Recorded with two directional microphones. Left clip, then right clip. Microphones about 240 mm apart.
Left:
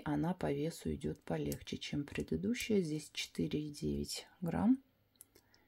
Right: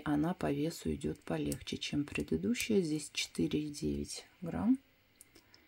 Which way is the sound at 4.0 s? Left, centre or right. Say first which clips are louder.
Even; centre.